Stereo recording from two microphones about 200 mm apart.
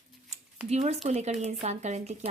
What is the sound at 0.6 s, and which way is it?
A woman's voice, 35° right (ahead or behind).